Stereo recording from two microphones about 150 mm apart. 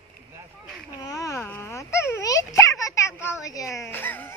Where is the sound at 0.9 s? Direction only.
25° left (ahead or behind).